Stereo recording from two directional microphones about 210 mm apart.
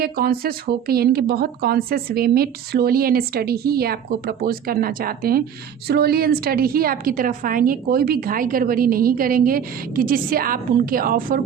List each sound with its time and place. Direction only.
0.0 s a woman's voice: 45° right (ahead or behind)